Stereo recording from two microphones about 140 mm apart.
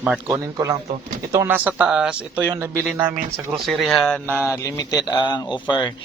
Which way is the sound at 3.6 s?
5° left (ahead or behind).